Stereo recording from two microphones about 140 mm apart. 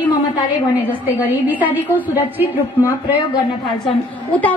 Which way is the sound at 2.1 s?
20° left (ahead or behind).